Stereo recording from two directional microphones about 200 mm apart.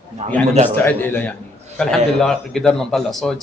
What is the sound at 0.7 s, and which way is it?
A man's voice, 10° left (ahead or behind).